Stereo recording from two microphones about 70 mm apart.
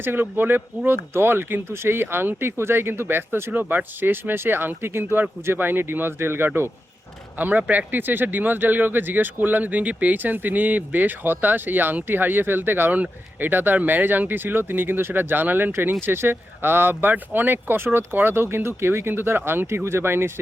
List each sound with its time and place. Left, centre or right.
0.0 s speech: right